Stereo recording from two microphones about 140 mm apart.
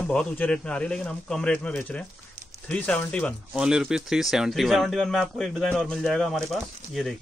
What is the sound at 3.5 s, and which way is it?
Speech, 5° right (ahead or behind).